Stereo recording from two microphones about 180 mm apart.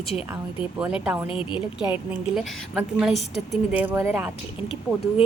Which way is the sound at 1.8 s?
5° right (ahead or behind).